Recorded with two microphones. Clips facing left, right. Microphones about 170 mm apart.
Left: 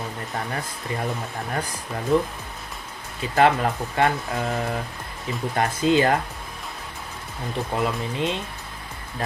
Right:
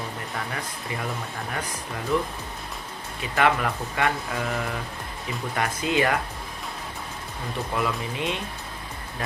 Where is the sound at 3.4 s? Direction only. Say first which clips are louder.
Left 4 dB; 35° left (ahead or behind).